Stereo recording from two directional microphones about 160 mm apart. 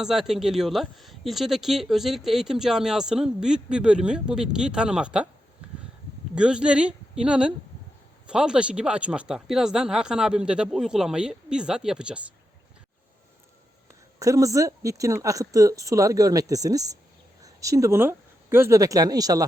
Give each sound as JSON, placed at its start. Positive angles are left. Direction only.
{"t": 0.0, "sound": "speech", "side_deg": 0}
{"t": 6.3, "sound": "speech", "side_deg": -5}
{"t": 14.2, "sound": "a woman's voice", "side_deg": -20}